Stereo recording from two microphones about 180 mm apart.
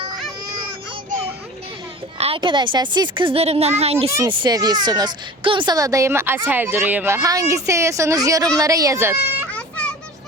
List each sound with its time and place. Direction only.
2.1 s speech: 30° right (ahead or behind)
4.2 s speech: 20° right (ahead or behind)
9.5 s a sound: 5° left (ahead or behind)